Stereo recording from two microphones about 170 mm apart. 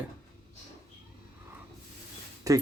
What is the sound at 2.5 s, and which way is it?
Speech, 20° right (ahead or behind).